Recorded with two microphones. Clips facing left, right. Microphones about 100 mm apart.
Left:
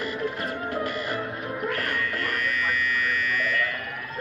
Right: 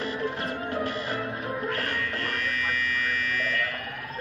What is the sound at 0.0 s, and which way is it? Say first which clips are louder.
Music: left 1 dB; 35° right (ahead or behind).